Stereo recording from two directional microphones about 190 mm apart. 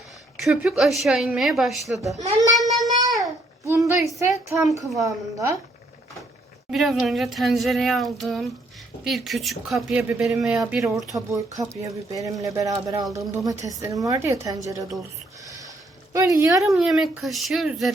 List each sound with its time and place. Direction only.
0.4 s speech: 5° right (ahead or behind)
2.1 s a child's voice: 35° right (ahead or behind)
2.6 s child singing: centre (ahead or behind)
3.7 s a woman's voice: 15° right (ahead or behind)
4.8 s speech: centre (ahead or behind)
5.0 s a woman's voice: 15° right (ahead or behind)
6.7 s speech: centre (ahead or behind)
11.8 s a woman's voice: 15° right (ahead or behind)
15.4 s a sound: 15° right (ahead or behind)
16.1 s a woman's voice: 15° right (ahead or behind)
16.6 s speech: centre (ahead or behind)